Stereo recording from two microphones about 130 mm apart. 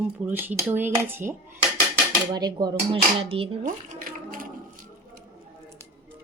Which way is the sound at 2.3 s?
30° right (ahead or behind).